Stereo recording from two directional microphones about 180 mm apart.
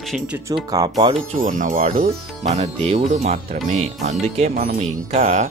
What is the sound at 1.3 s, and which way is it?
Speech, 45° right (ahead or behind).